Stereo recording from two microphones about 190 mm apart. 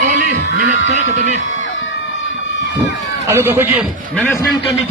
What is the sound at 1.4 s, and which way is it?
Music, 85° left.